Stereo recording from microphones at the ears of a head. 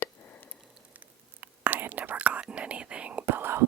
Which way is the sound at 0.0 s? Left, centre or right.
Left.